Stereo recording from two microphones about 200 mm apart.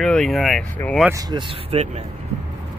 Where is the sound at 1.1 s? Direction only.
20° right (ahead or behind).